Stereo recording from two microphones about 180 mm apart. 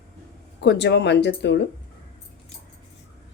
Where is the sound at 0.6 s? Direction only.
70° left (ahead or behind).